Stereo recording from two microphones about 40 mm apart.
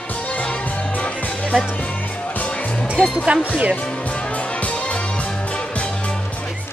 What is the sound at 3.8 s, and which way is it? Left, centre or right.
Music, left.